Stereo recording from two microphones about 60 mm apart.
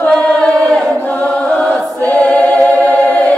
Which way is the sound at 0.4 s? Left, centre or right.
Centre.